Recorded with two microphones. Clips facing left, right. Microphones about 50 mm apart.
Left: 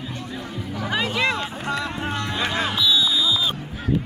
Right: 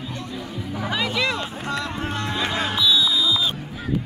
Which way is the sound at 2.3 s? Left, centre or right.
Left.